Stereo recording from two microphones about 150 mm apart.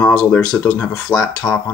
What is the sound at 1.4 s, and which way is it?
Speech, 5° left (ahead or behind).